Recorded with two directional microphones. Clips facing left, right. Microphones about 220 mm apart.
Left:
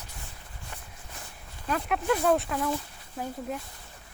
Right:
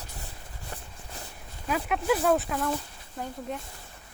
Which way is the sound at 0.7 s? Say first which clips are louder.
Right 5 dB; 35° right (ahead or behind).